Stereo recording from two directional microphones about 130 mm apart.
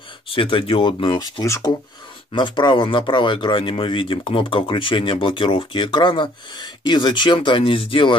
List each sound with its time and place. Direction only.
0.3 s speech: 40° left (ahead or behind)
1.4 s speech: 25° left (ahead or behind)
2.3 s speech: 35° left (ahead or behind)